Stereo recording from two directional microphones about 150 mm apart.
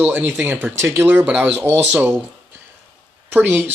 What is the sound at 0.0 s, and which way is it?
Speech, 10° right (ahead or behind).